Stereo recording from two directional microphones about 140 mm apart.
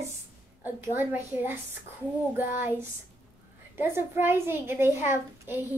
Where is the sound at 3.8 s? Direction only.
15° right (ahead or behind).